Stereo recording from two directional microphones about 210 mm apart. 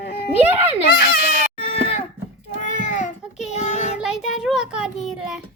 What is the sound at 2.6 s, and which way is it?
Baby cry, 35° left (ahead or behind).